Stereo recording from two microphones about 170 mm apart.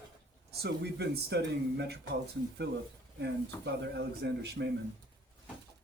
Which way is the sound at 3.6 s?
85° right.